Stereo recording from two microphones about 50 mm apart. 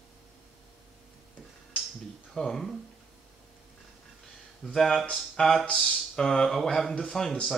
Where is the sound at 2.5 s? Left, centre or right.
Centre.